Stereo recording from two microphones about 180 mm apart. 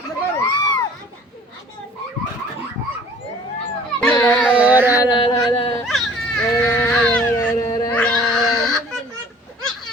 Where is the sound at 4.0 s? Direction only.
10° left (ahead or behind).